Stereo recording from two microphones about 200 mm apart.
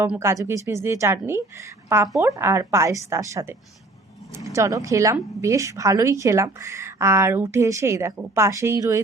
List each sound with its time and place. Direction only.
0.0 s a woman's voice: 10° right (ahead or behind)